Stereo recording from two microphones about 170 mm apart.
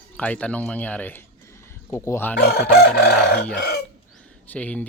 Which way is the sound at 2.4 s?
65° left (ahead or behind).